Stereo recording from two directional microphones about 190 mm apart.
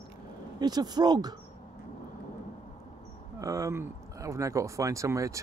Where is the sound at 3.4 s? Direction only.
15° right (ahead or behind).